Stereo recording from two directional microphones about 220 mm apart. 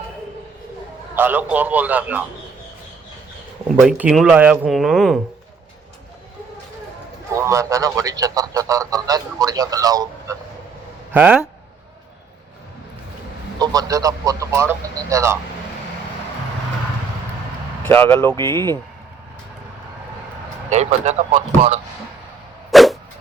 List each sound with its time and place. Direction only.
1.1 s a man's voice: 10° right (ahead or behind)
3.8 s speech: 5° right (ahead or behind)
7.3 s a man's voice: 15° right (ahead or behind)
13.6 s a man's voice: 15° right (ahead or behind)
17.8 s speech: 10° left (ahead or behind)
20.7 s speech: 30° right (ahead or behind)
22.7 s a sound: centre (ahead or behind)